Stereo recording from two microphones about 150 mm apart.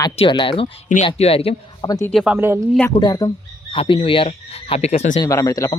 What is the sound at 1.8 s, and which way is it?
Speech, 25° left (ahead or behind).